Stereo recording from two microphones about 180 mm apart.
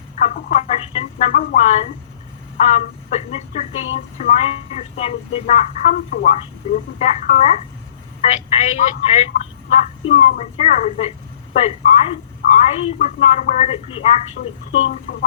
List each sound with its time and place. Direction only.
0.2 s speech: 45° left (ahead or behind)